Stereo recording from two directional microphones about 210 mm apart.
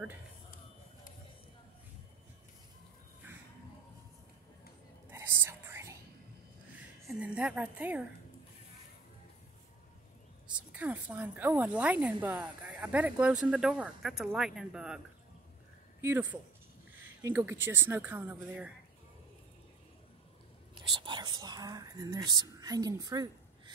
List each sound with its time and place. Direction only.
5.1 s whispering: 10° right (ahead or behind)
7.1 s a woman's voice: 5° right (ahead or behind)
10.7 s speech: 5° right (ahead or behind)
16.0 s speech: 10° right (ahead or behind)
20.7 s speech: 20° right (ahead or behind)